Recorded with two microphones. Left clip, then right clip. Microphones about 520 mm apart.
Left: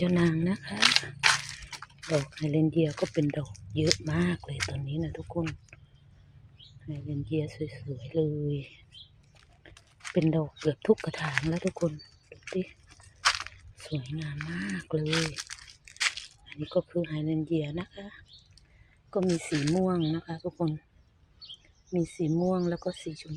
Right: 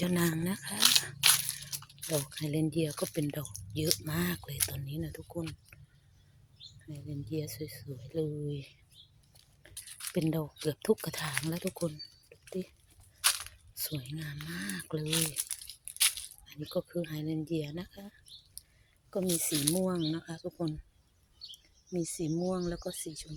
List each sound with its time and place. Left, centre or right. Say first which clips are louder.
0.0 s speech: left 5 dB; right
2.4 s speech: left 6 dB; right
2.9 s speech: left 6 dB; right
6.8 s speech: left 7 dB; right
13.2 s crunch: left 5 dB; right
13.8 s speech: left 3 dB; right
16.0 s a sound: left 2 dB; right
16.6 s speech: left 6 dB; right
19.1 s speech: left 4 dB; right
21.9 s speech: left 5 dB; right